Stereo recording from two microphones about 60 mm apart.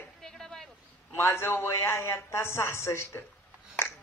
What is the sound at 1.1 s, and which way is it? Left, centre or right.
A man's voice, left.